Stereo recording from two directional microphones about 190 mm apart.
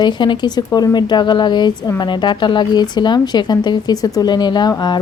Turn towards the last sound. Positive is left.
turn(degrees=20)  # may be behind; listen again after turning